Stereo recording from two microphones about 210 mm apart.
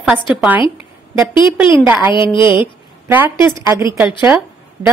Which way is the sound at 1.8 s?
10° right (ahead or behind).